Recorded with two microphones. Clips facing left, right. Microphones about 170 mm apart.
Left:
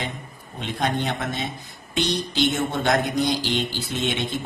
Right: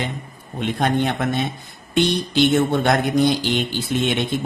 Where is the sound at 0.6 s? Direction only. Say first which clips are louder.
Right 5 dB; 55° right (ahead or behind).